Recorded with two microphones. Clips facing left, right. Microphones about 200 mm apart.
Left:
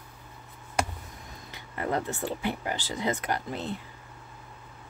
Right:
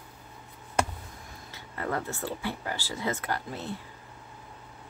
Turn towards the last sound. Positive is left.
turn(degrees=20)  # may be behind; listen again after turning